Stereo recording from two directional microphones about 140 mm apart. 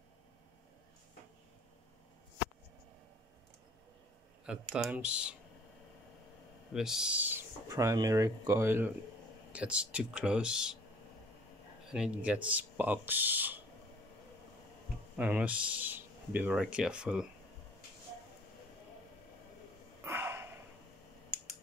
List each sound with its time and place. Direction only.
4.5 s speech: 5° right (ahead or behind)
6.7 s speech: 5° right (ahead or behind)
7.6 s speech: 25° right (ahead or behind); by 10.8 s 5° right (ahead or behind)
11.9 s speech: 5° right (ahead or behind)
15.1 s speech: 10° right (ahead or behind)
20.0 s a sound: 15° right (ahead or behind)